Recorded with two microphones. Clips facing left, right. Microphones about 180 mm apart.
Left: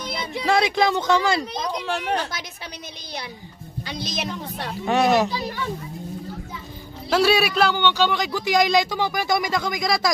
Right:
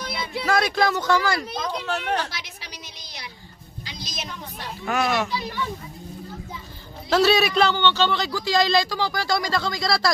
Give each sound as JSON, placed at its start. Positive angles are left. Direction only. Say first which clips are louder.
{"t": 0.4, "sound": "speech", "louder": "left 2 dB", "side_deg": 25}
{"t": 1.5, "sound": "a man's voice", "louder": "left 1 dB", "side_deg": 15}
{"t": 3.8, "sound": "a sound", "louder": "left 7 dB", "side_deg": 55}
{"t": 4.8, "sound": "speech", "louder": "left 5 dB", "side_deg": 35}
{"t": 7.1, "sound": "a man's voice", "louder": "even", "side_deg": 10}